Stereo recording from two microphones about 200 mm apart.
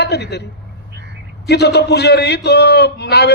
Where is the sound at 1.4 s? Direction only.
55° left (ahead or behind).